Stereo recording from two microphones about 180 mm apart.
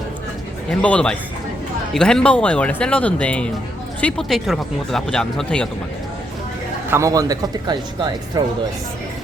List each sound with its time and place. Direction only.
0.7 s speech: 5° left (ahead or behind)
6.9 s speech: 20° right (ahead or behind)